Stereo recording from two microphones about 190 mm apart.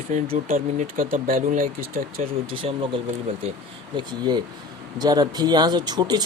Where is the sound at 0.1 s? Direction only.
45° right (ahead or behind).